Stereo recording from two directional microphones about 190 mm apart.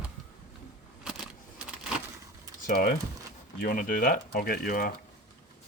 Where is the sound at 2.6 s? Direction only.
50° left (ahead or behind).